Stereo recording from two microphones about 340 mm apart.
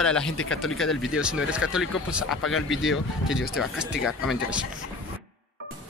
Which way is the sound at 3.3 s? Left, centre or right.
Left.